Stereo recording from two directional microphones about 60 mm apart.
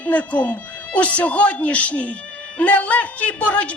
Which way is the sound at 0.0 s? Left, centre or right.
Left.